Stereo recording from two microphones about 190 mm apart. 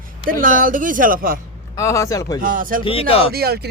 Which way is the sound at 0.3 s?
45° right (ahead or behind).